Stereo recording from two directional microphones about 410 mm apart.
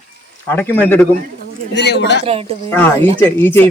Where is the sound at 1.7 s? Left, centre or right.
Left.